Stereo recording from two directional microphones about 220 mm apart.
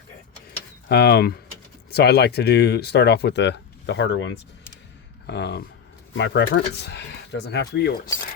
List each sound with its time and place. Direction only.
0.9 s speech: 50° left (ahead or behind)
5.2 s speech: 50° left (ahead or behind)